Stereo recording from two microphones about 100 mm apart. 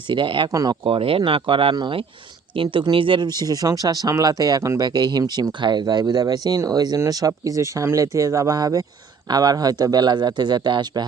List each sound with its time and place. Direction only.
0.1 s speech: 55° right (ahead or behind)
0.5 s speech: 40° right (ahead or behind)
0.9 s speech: 65° right (ahead or behind)
1.7 s speech: 45° right (ahead or behind)
2.6 s speech: 55° right (ahead or behind)